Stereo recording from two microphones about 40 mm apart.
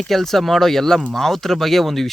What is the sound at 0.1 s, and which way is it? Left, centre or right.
Speech, centre.